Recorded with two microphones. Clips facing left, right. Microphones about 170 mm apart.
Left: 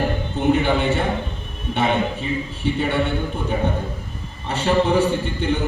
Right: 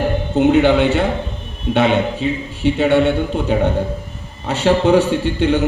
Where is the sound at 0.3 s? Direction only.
75° right (ahead or behind).